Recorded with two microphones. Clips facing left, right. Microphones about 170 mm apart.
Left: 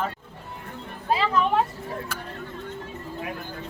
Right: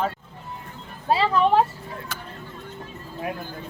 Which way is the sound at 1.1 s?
30° right (ahead or behind).